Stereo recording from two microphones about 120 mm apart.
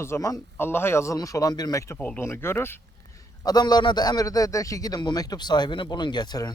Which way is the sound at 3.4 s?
35° left (ahead or behind).